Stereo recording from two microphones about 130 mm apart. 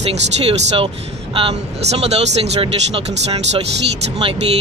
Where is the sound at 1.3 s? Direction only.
50° right (ahead or behind).